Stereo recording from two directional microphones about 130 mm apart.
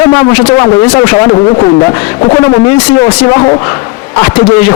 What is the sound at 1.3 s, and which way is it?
Speech, 45° left (ahead or behind).